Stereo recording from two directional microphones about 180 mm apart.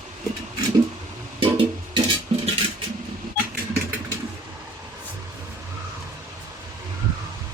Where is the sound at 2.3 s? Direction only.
30° right (ahead or behind).